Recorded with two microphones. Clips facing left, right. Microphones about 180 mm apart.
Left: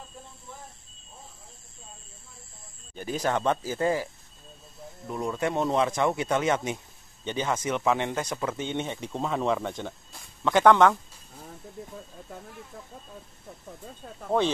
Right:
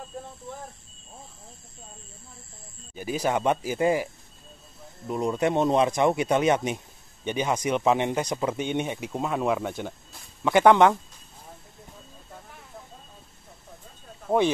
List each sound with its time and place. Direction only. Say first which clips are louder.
2.9 s speech: right 2 dB; 10° right (ahead or behind)